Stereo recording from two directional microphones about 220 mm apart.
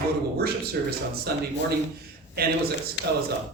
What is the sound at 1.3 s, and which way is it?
Speech, 45° right (ahead or behind).